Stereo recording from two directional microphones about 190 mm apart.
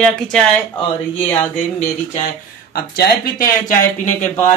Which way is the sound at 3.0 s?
50° left (ahead or behind).